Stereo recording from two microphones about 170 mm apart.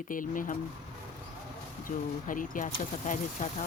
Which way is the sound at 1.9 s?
50° left (ahead or behind).